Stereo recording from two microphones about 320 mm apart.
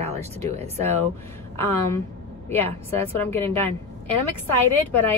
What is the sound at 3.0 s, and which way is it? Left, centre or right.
Speech, centre.